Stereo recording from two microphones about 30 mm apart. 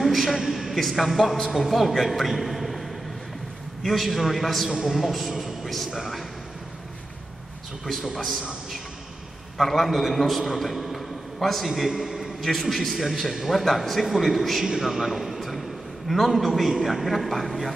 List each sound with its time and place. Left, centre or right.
0.0 s a sound: centre
0.7 s a man's voice: centre
4.6 s a man's voice: right
4.9 s a man's voice: centre
5.3 s a sound: centre
8.2 s a man's voice: centre
9.6 s a man's voice: centre
12.0 s a sound: centre
12.4 s a man's voice: centre
14.8 s a man's voice: centre